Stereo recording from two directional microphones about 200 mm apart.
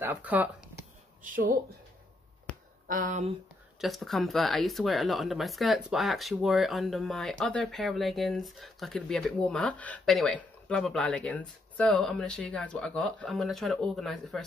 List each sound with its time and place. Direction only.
0.0 s speech: 10° right (ahead or behind)
1.2 s speech: 40° right (ahead or behind)
2.9 s speech: 40° right (ahead or behind)
3.8 s speech: centre (ahead or behind)